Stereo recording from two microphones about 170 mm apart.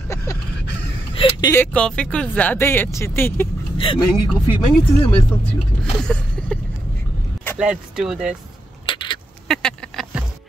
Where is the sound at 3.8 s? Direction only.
30° left (ahead or behind).